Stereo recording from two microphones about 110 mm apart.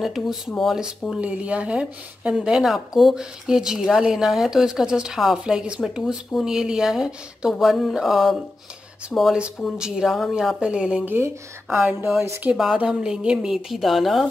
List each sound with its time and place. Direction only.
0.0 s a woman's voice: centre (ahead or behind)
11.8 s speech: 20° right (ahead or behind)
12.7 s a woman's voice: 5° right (ahead or behind)